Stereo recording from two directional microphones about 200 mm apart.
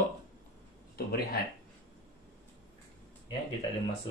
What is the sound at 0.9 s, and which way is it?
Speech, 50° left (ahead or behind).